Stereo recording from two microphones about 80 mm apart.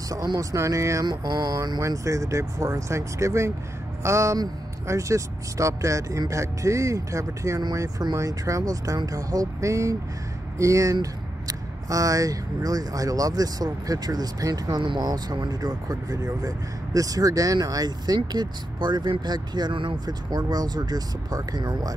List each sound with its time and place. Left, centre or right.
0.4 s speech: right
1.0 s mantra: right
1.8 s speech: right
20.2 s speech: right